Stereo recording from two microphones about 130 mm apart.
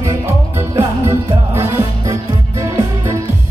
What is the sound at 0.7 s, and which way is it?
Music, 20° right (ahead or behind).